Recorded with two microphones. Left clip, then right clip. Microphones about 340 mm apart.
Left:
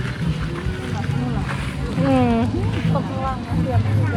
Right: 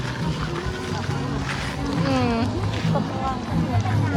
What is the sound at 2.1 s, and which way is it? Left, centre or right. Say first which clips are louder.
Speech: left 5 dB; centre.